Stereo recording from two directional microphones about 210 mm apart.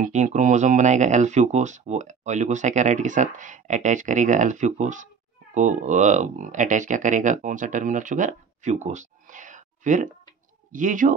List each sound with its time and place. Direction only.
0.0 s speech: 35° right (ahead or behind)